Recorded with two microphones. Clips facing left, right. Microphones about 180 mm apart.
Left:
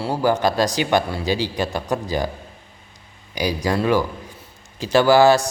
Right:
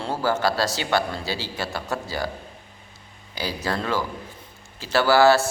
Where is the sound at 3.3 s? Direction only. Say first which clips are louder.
Left 6 dB; 15° left (ahead or behind).